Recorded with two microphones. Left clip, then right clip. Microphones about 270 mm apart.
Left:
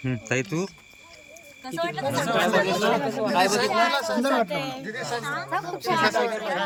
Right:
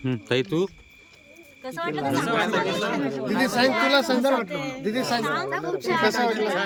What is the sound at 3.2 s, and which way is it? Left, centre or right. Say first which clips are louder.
Speech: even; right.